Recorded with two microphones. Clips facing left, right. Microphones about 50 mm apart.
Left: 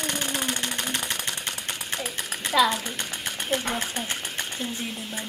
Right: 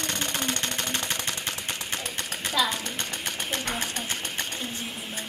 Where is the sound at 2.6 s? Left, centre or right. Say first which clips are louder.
Left 5 dB; centre.